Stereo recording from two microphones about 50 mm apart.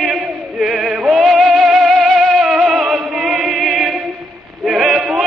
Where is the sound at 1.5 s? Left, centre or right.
Centre.